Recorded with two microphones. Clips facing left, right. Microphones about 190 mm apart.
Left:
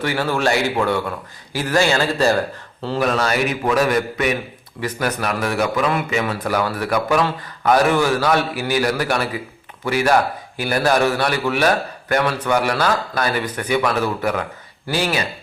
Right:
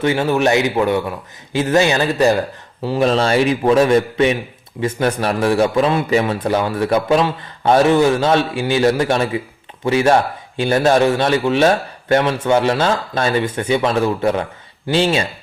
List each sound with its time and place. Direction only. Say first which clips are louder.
0.0 s a man's voice: right 4 dB; 20° right (ahead or behind)
3.0 s a man's voice: right 5 dB; 30° right (ahead or behind)